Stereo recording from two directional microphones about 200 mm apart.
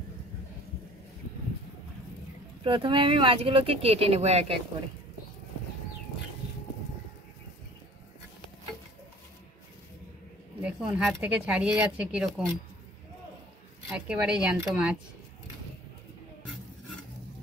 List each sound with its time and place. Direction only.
2.6 s speech: 25° right (ahead or behind)
10.6 s speech: 5° right (ahead or behind)
13.8 s speech: 5° right (ahead or behind)